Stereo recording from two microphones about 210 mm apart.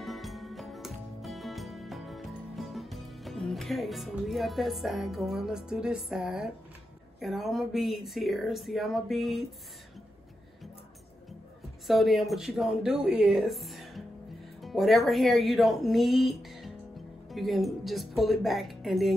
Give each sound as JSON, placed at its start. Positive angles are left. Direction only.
{"t": 0.0, "sound": "music", "side_deg": 0}
{"t": 7.2, "sound": "speech", "side_deg": 0}
{"t": 11.9, "sound": "speech", "side_deg": 0}